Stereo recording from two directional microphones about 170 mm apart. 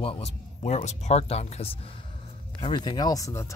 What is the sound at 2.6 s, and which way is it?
Speech, 25° left (ahead or behind).